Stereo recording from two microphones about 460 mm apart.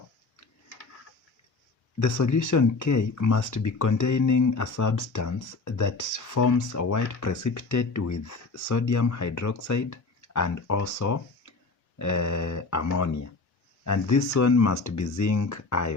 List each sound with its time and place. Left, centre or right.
2.0 s speech: left